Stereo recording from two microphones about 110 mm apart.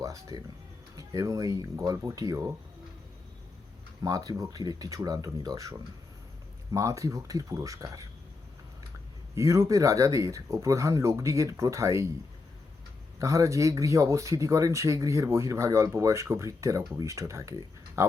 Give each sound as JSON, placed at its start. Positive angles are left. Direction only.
{"t": 0.0, "sound": "speech", "side_deg": -35}
{"t": 4.0, "sound": "speech", "side_deg": -35}
{"t": 6.7, "sound": "speech", "side_deg": -30}
{"t": 9.3, "sound": "speech", "side_deg": -25}
{"t": 13.1, "sound": "speech", "side_deg": -30}